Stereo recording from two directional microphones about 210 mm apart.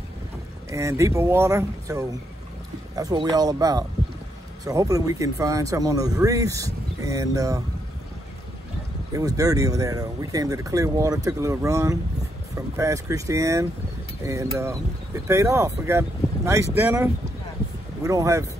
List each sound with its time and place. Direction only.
0.7 s speech: 15° right (ahead or behind)
9.1 s speech: 15° right (ahead or behind)